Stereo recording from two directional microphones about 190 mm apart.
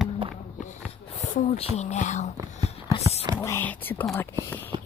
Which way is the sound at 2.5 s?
35° left (ahead or behind).